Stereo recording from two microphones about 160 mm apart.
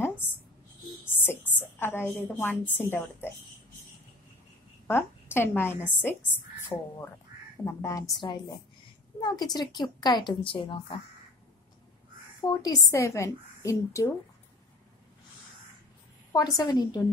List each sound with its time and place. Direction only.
0.0 s a sound: 15° left (ahead or behind)
2.2 s a woman's voice: 15° left (ahead or behind)
4.8 s a woman's voice: 15° left (ahead or behind); by 11.0 s 35° left (ahead or behind)
12.4 s a woman's voice: 25° left (ahead or behind)
16.3 s a woman's voice: 25° left (ahead or behind)